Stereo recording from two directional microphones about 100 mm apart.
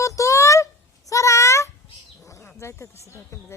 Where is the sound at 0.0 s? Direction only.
30° left (ahead or behind).